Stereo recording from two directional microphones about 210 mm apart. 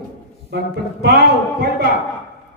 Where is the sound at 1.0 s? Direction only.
50° right (ahead or behind).